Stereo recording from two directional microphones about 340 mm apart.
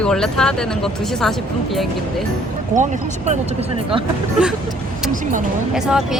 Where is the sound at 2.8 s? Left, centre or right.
Right.